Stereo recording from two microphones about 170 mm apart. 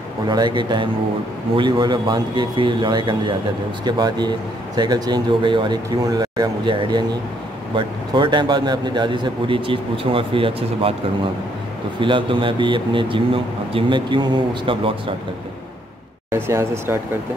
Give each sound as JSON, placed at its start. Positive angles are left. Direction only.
{"t": 0.3, "sound": "speech", "side_deg": -25}
{"t": 12.0, "sound": "speech", "side_deg": -30}
{"t": 16.3, "sound": "speech", "side_deg": -15}